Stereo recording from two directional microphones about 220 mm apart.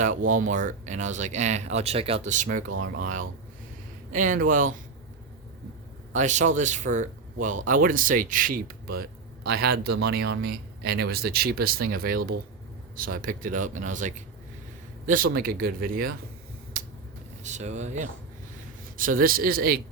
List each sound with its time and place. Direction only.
0.0 s speech: 35° right (ahead or behind)
2.6 s speech: 65° right (ahead or behind)
2.9 s speech: 35° right (ahead or behind)
6.1 s speech: 35° right (ahead or behind)
16.7 s finger snapping: 40° right (ahead or behind)
17.4 s speech: 30° right (ahead or behind)